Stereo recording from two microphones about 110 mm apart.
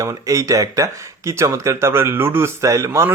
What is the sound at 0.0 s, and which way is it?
Speech, 30° right (ahead or behind).